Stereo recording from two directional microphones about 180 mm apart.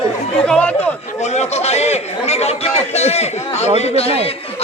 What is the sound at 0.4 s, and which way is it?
Speech, 5° left (ahead or behind).